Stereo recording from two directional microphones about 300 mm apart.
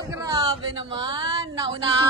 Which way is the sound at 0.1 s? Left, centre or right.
Centre.